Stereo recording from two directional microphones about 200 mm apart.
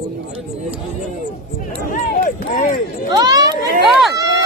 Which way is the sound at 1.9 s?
40° left (ahead or behind).